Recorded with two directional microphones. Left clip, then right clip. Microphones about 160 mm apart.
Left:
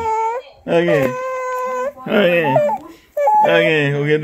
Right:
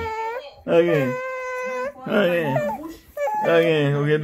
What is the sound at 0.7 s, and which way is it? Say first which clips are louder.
Speech: left 2 dB; 60° left (ahead or behind).